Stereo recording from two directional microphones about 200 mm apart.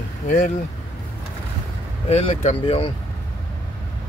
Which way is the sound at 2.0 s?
30° left (ahead or behind).